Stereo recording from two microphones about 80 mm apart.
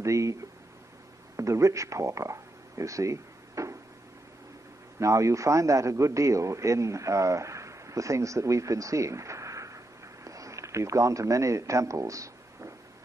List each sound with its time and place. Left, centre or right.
0.0 s speech: right
4.9 s a man's voice: right